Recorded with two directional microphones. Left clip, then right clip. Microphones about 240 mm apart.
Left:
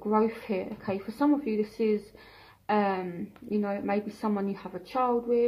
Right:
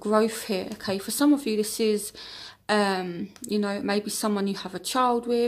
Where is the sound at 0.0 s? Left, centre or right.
Right.